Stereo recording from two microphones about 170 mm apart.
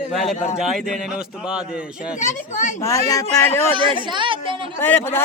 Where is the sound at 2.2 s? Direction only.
45° left (ahead or behind).